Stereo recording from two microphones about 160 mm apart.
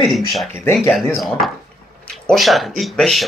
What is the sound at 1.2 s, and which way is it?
Speech, centre (ahead or behind).